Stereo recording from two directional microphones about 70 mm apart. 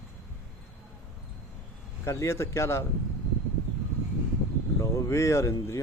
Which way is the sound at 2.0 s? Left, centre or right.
Left.